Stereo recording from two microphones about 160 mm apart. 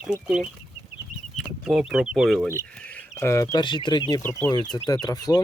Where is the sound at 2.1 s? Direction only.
Centre (ahead or behind).